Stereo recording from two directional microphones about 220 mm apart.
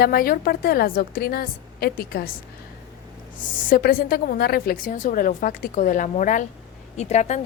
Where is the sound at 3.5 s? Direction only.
40° left (ahead or behind).